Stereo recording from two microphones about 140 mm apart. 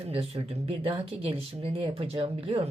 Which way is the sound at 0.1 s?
45° right (ahead or behind).